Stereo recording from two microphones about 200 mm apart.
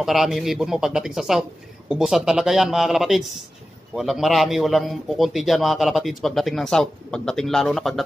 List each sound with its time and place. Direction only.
0.0 s a man's voice: centre (ahead or behind)